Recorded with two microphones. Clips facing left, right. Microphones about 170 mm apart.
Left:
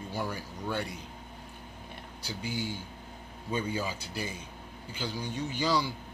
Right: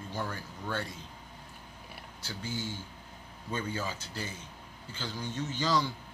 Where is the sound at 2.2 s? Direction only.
15° left (ahead or behind).